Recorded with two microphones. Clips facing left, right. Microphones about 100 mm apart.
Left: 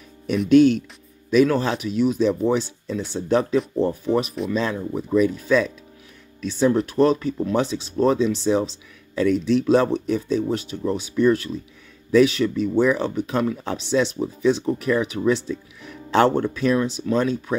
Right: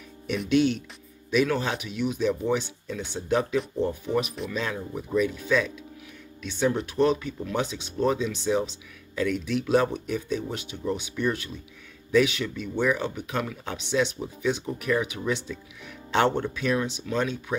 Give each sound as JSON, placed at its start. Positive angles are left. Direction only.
{"t": 0.5, "sound": "speech", "side_deg": 45}
{"t": 4.0, "sound": "speech", "side_deg": 35}